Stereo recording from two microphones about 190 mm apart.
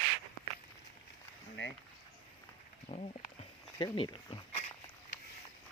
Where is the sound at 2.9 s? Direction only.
35° left (ahead or behind).